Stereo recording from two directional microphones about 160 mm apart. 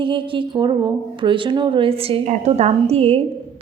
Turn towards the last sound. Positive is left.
turn(degrees=-40)  # may be behind; listen again after turning